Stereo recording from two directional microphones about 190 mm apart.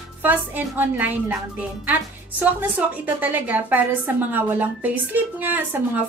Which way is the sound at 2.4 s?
10° right (ahead or behind).